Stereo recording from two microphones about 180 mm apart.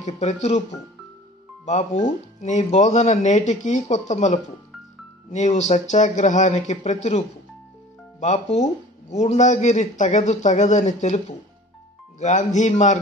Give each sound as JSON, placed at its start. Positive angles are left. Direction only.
{"t": 0.0, "sound": "speech", "side_deg": 40}
{"t": 1.7, "sound": "speech", "side_deg": 40}